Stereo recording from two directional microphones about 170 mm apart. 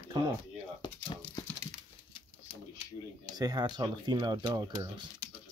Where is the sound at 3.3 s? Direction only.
25° right (ahead or behind).